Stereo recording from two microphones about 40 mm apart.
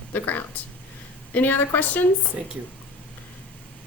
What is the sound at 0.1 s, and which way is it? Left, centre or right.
A woman's voice, left.